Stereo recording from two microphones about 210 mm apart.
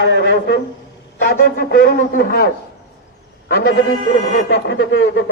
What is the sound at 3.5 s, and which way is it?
A man's voice, 50° left (ahead or behind).